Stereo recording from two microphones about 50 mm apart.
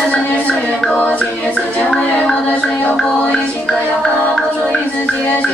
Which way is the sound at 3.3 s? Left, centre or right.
Centre.